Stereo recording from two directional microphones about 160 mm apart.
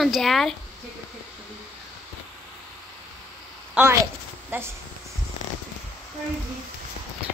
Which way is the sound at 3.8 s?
5° right (ahead or behind).